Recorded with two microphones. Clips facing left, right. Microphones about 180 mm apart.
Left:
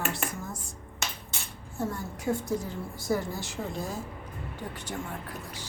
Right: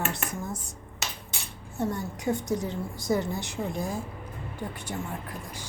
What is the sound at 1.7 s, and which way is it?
A woman's voice, 20° right (ahead or behind).